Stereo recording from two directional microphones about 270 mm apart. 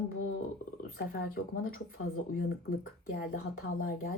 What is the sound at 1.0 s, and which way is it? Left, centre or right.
Speech, left.